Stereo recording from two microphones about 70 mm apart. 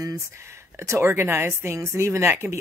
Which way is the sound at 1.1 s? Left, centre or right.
Right.